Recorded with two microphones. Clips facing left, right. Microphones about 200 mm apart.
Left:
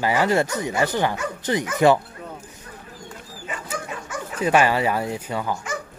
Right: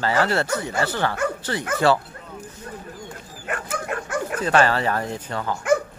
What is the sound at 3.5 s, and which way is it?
Bow-wow, 60° right (ahead or behind).